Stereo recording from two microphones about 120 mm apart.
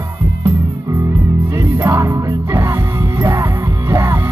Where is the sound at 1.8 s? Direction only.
25° right (ahead or behind).